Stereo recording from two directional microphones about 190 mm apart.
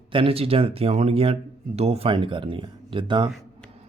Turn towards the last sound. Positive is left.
turn(degrees=-25)  # may be behind; listen again after turning